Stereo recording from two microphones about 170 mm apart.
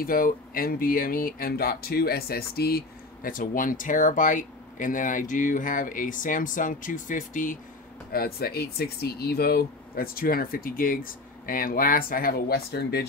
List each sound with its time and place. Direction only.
0.0 s speech: 55° left (ahead or behind)
8.1 s speech: 65° left (ahead or behind)